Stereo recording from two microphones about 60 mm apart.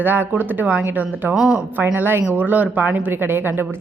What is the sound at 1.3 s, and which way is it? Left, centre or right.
Speech, centre.